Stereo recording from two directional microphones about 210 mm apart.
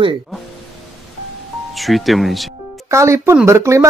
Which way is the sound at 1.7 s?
Centre (ahead or behind).